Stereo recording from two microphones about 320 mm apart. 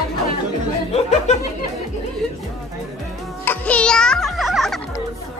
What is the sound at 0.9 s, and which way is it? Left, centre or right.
Speech, centre.